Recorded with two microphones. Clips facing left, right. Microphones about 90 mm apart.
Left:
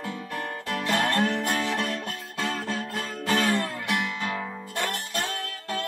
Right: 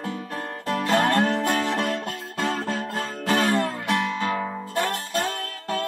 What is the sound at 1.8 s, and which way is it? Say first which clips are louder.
Music: right 4 dB; 55° right (ahead or behind).